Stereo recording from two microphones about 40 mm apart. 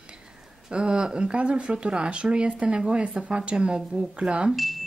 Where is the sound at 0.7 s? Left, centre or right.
Right.